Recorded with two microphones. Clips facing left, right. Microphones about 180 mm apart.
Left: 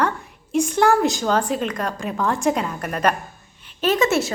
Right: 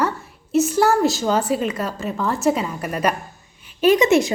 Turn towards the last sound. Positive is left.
turn(degrees=-15)  # may be behind; listen again after turning